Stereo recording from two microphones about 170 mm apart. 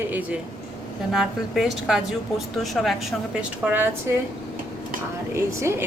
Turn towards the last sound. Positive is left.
turn(degrees=-15)  # may be behind; listen again after turning